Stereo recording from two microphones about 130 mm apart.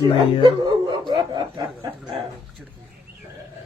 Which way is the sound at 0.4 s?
40° right (ahead or behind).